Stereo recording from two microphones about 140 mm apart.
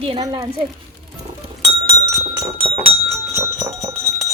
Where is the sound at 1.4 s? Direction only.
40° right (ahead or behind).